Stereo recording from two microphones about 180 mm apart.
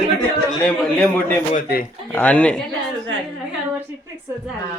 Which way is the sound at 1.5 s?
50° left (ahead or behind).